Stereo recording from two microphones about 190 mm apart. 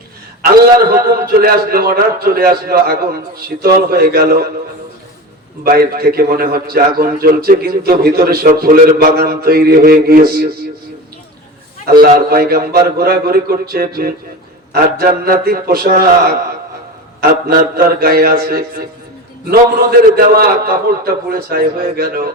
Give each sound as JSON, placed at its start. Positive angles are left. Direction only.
{"t": 0.5, "sound": "a man's voice", "side_deg": -50}
{"t": 5.6, "sound": "a man's voice", "side_deg": -55}
{"t": 11.9, "sound": "a man's voice", "side_deg": -55}